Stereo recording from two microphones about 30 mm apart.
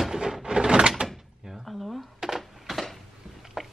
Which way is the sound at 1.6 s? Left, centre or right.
Centre.